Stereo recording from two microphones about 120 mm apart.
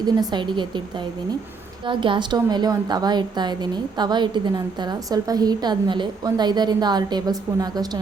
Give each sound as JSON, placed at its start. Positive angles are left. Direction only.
{"t": 0.0, "sound": "a woman's voice", "side_deg": -35}
{"t": 1.9, "sound": "a woman's voice", "side_deg": -45}